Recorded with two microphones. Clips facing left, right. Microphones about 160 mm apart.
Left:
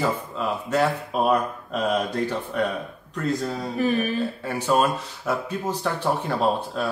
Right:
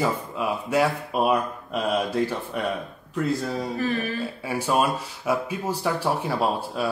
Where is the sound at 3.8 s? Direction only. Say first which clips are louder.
Left 6 dB; 15° left (ahead or behind).